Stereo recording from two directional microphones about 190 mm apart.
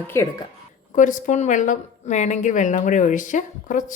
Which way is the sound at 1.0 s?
40° left (ahead or behind).